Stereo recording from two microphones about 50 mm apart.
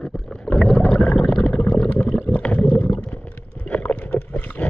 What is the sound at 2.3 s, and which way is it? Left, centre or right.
Stomach rumble, left.